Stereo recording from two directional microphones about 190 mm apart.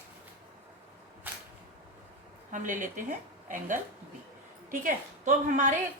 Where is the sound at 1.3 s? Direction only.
10° right (ahead or behind).